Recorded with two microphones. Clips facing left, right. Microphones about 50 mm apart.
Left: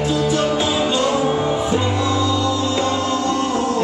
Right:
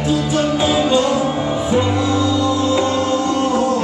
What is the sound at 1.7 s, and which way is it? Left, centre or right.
Music, centre.